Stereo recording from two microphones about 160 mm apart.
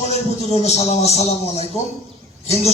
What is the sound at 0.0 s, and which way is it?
Speech, 40° left (ahead or behind).